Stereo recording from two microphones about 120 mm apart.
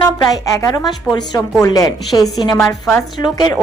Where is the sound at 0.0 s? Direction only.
30° left (ahead or behind).